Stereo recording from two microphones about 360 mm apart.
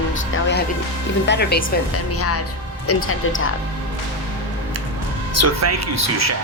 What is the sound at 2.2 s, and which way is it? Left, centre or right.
Speech, left.